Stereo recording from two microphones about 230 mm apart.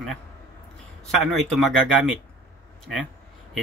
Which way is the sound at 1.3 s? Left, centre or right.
Centre.